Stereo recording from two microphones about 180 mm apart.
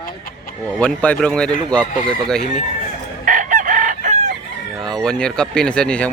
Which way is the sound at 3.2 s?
45° right (ahead or behind).